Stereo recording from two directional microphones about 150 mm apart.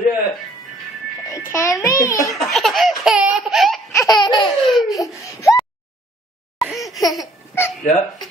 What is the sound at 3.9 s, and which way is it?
Laughter, 25° left (ahead or behind).